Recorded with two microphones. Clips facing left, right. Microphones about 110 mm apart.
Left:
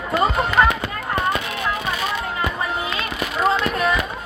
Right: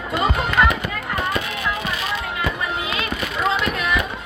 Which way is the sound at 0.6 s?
25° left (ahead or behind).